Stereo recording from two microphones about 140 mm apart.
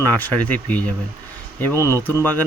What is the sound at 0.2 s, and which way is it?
Speech, 10° left (ahead or behind).